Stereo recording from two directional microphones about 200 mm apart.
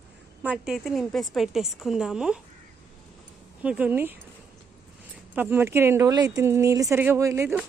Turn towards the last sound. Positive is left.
turn(degrees=-15)  # may be behind; listen again after turning